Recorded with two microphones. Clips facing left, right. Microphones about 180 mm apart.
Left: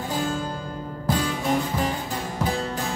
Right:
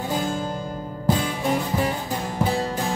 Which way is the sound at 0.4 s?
15° right (ahead or behind).